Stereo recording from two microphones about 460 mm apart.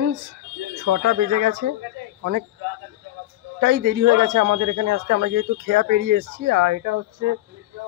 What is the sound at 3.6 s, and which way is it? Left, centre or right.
Speech, right.